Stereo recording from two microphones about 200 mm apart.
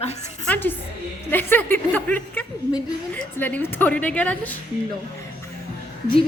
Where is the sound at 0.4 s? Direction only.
10° left (ahead or behind).